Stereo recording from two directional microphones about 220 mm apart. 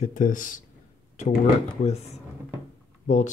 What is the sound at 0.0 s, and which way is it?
Speech, 35° left (ahead or behind).